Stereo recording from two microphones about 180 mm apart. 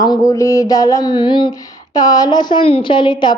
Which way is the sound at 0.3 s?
20° left (ahead or behind).